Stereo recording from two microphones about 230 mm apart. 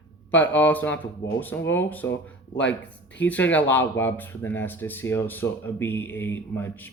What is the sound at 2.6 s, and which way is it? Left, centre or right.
Speech, left.